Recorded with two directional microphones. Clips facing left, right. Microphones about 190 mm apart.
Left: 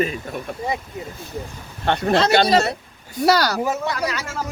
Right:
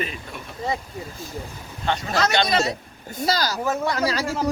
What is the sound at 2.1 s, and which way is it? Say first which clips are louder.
Speech: left 5 dB; 30° left (ahead or behind).